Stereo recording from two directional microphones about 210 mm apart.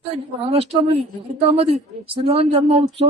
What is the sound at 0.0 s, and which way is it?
A man's voice, 30° right (ahead or behind).